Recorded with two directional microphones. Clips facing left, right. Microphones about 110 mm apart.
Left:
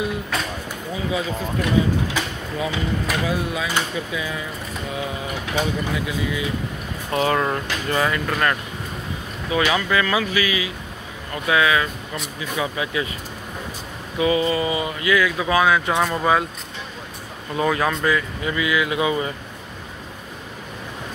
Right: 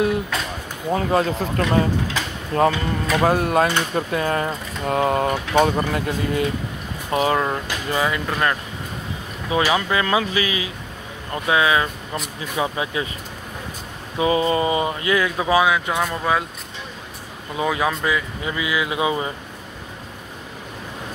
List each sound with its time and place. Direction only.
0.9 s speech: 60° right (ahead or behind)
2.5 s speech: 75° right (ahead or behind)
3.2 s speech: 60° right (ahead or behind)
7.1 s speech: 15° right (ahead or behind)
9.5 s speech: 25° right (ahead or behind)
14.1 s speech: 30° right (ahead or behind)
15.6 s speech: 5° right (ahead or behind)
17.6 s speech: 10° right (ahead or behind)